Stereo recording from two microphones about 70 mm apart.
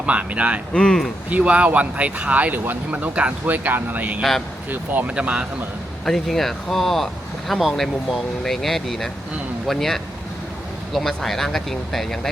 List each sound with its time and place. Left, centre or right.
0.0 s speech: centre
0.7 s speech: centre
1.3 s speech: centre
4.2 s speech: centre
4.7 s speech: right
5.1 s speech: centre
6.1 s speech: centre